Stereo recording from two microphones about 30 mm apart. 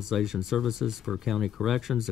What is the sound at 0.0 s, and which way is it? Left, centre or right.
Speech, centre.